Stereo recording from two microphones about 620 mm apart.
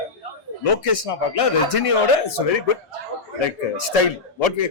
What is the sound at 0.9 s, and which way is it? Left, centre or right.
Speech, left.